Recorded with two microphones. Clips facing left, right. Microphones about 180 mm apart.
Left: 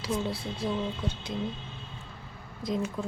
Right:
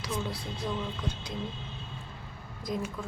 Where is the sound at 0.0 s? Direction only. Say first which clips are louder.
Left 4 dB; 30° left (ahead or behind).